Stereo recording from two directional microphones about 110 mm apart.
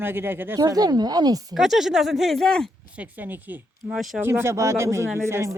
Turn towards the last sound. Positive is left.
turn(degrees=-25)  # may be behind; listen again after turning